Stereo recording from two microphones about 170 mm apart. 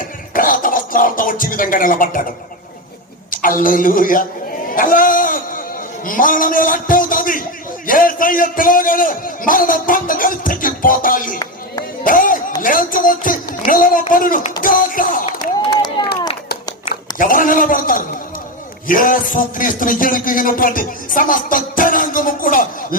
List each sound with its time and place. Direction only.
0.3 s speech: 55° left (ahead or behind)
3.3 s a man's voice: 55° left (ahead or behind)
4.7 s a sound: 55° left (ahead or behind)
6.1 s a man's voice: 55° left (ahead or behind)
12.0 s music: 55° left (ahead or behind)
12.6 s a man's voice: 55° left (ahead or behind)
15.3 s a sound: 25° left (ahead or behind)
16.9 s a man's voice: 55° left (ahead or behind)